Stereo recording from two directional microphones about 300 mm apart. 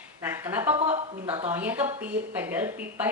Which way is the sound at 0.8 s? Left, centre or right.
Right.